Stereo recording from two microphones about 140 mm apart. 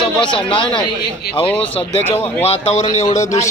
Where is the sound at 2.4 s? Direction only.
45° left (ahead or behind).